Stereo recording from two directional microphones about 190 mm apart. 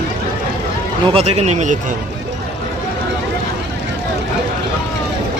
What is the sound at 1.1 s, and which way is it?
Speech, 35° right (ahead or behind).